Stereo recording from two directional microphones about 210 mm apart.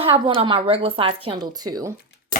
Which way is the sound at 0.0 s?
25° right (ahead or behind).